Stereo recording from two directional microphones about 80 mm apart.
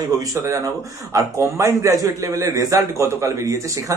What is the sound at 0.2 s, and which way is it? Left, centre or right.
A man's voice, right.